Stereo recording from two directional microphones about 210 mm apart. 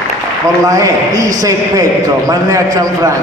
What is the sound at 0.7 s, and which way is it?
A man's voice, 15° right (ahead or behind).